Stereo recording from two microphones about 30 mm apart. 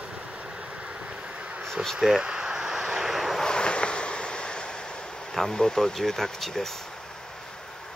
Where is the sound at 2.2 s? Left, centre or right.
Right.